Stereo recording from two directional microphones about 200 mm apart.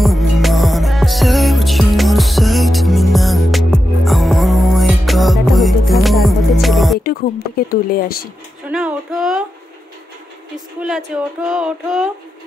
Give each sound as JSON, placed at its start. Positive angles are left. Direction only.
{"t": 0.0, "sound": "music", "side_deg": 0}
{"t": 7.0, "sound": "speech", "side_deg": 50}
{"t": 8.6, "sound": "speech", "side_deg": -5}
{"t": 10.8, "sound": "speech", "side_deg": -5}